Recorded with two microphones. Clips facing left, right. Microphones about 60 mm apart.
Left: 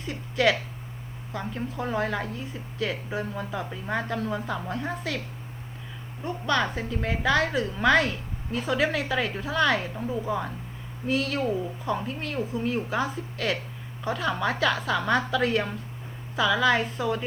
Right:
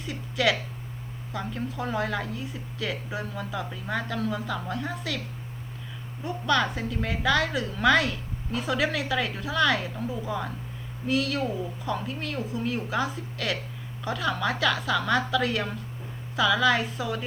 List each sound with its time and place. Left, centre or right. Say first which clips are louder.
0.3 s a woman's voice: left 2 dB; centre
1.7 s a woman's voice: left 1 dB; left
3.3 s a woman's voice: left 1 dB; centre
6.4 s a woman's voice: right 1 dB; centre
11.0 s a woman's voice: even; left
17.0 s a woman's voice: left 4 dB; centre